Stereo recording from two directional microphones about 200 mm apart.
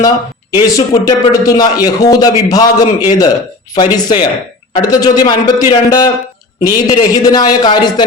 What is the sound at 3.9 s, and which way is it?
Speech, 20° left (ahead or behind).